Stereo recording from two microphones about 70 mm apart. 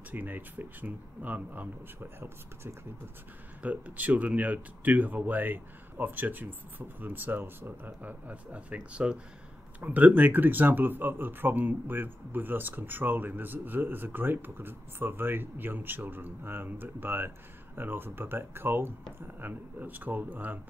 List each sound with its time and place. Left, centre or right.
0.1 s speech: right
2.1 s speech: right
3.6 s speech: right